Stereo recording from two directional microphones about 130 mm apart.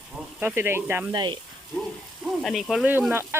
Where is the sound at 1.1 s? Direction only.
35° right (ahead or behind).